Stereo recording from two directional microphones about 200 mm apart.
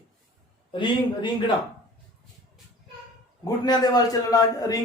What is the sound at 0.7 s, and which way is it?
Speech, 25° left (ahead or behind).